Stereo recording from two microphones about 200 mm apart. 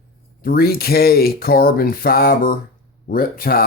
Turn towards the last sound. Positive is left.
turn(degrees=45)  # may be behind; listen again after turning